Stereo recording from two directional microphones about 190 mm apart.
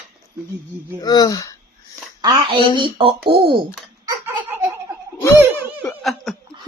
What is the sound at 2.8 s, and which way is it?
Speech, 25° right (ahead or behind).